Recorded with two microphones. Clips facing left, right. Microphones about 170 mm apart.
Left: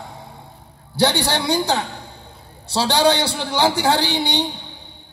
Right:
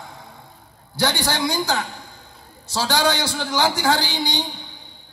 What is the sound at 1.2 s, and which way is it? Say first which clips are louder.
A man's voice: left 3 dB; 30° left (ahead or behind).